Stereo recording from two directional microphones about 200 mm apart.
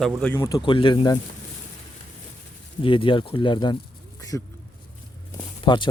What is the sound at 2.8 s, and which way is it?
Speech, 25° left (ahead or behind).